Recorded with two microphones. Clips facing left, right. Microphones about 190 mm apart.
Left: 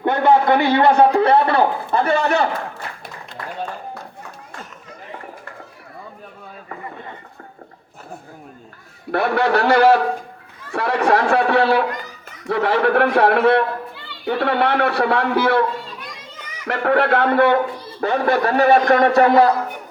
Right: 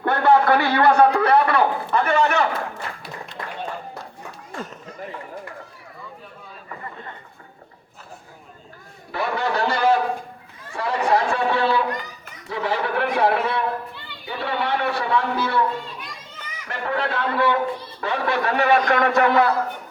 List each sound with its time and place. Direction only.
0.0 s a sound: 20° left (ahead or behind)
9.1 s speech: 65° left (ahead or behind)
10.7 s chatter: 70° left (ahead or behind)
12.5 s a man's voice: 65° left (ahead or behind)
16.6 s a man's voice: 70° left (ahead or behind)
18.0 s a man's voice: 45° left (ahead or behind)